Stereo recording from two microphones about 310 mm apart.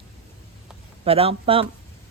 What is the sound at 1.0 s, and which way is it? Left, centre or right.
Speech, centre.